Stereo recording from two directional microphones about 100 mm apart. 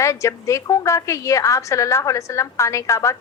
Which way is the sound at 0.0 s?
30° left (ahead or behind).